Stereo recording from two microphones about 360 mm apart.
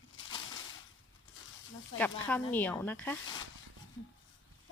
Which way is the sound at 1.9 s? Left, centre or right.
Centre.